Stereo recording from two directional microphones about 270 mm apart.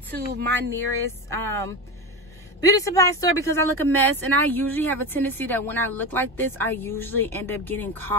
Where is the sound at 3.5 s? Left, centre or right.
Right.